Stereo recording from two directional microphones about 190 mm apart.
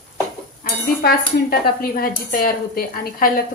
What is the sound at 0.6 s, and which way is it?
Cutlery, 50° left (ahead or behind).